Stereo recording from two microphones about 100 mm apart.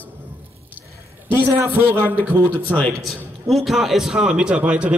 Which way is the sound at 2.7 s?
15° left (ahead or behind).